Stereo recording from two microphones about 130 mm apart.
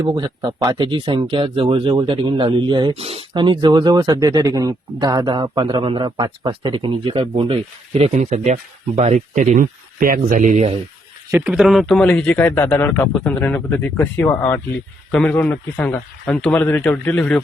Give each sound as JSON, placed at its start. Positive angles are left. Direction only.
{"t": 0.0, "sound": "speech", "side_deg": -30}
{"t": 2.9, "sound": "speech", "side_deg": -50}
{"t": 11.3, "sound": "speech", "side_deg": -15}
{"t": 11.5, "sound": "speech", "side_deg": 0}